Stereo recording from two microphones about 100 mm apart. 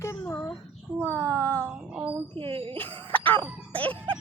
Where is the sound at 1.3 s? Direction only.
15° left (ahead or behind).